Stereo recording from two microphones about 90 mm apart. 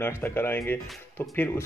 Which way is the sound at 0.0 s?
25° left (ahead or behind).